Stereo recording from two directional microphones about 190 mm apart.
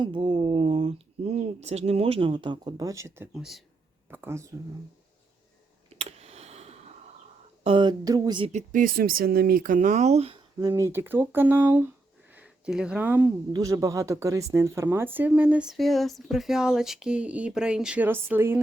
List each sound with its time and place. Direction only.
0.0 s speech: 25° right (ahead or behind)
3.3 s speech: centre (ahead or behind)
4.1 s speech: 15° right (ahead or behind)
5.9 s a sound: 35° right (ahead or behind)
7.6 s speech: 25° right (ahead or behind)
8.5 s speech: 45° right (ahead or behind)
10.6 s speech: 15° right (ahead or behind)